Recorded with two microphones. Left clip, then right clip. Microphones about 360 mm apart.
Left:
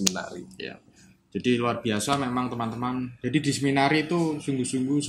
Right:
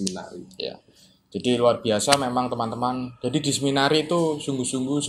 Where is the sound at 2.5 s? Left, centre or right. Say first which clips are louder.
Right 5 dB; centre.